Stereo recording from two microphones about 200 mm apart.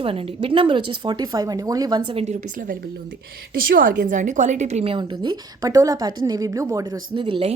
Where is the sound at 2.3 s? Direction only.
45° right (ahead or behind).